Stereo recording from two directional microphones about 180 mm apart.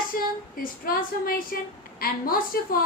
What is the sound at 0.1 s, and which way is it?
Female singing, 55° left (ahead or behind).